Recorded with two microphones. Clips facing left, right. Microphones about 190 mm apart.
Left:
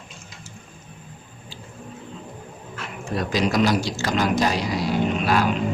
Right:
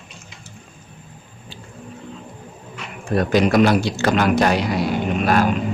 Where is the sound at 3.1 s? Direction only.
55° right (ahead or behind).